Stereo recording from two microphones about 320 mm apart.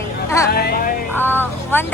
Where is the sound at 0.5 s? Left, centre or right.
Left.